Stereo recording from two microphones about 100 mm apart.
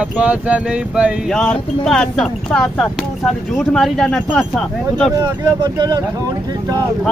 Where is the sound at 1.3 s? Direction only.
5° left (ahead or behind).